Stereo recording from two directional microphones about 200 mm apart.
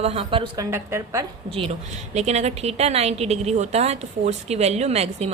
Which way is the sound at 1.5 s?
30° right (ahead or behind).